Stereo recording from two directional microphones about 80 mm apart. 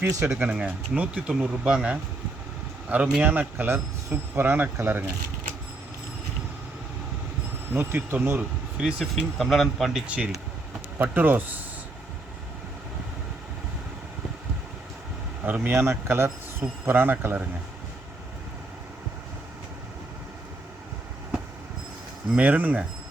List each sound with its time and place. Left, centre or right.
0.0 s speech: right
0.3 s speech: centre
3.2 s speech: right
7.7 s speech: right
8.8 s speech: centre
10.1 s speech: centre
10.9 s speech: right
15.4 s speech: right
22.3 s speech: centre